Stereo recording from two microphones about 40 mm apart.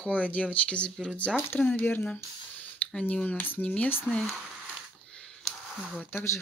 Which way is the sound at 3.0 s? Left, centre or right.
Left.